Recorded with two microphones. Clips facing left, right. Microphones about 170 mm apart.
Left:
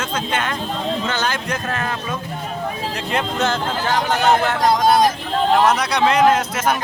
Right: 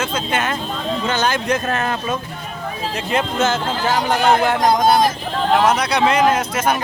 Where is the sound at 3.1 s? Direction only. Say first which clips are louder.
Right 2 dB; centre (ahead or behind).